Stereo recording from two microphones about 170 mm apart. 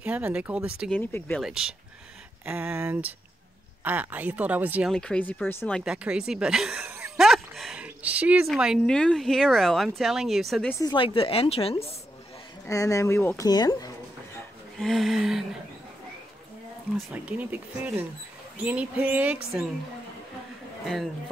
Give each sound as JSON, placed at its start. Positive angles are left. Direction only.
{"t": 0.0, "sound": "speech", "side_deg": -10}
{"t": 0.8, "sound": "speech", "side_deg": 10}
{"t": 1.4, "sound": "speech", "side_deg": -5}
{"t": 4.9, "sound": "speech", "side_deg": 5}
{"t": 10.7, "sound": "speech", "side_deg": 20}
{"t": 11.1, "sound": "speech", "side_deg": 35}
{"t": 12.6, "sound": "speech", "side_deg": 20}
{"t": 14.8, "sound": "speech", "side_deg": 0}
{"t": 17.1, "sound": "speech", "side_deg": -10}